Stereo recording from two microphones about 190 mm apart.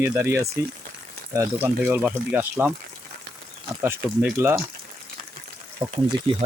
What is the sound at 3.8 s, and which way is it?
Speech, 10° right (ahead or behind).